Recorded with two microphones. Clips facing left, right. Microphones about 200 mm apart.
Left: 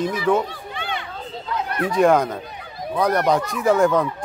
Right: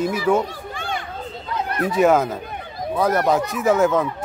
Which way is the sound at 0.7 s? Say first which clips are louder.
Right 1 dB; 45° right (ahead or behind).